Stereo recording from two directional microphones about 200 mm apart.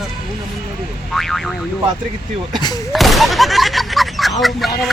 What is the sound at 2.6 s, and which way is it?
Speech, 20° left (ahead or behind).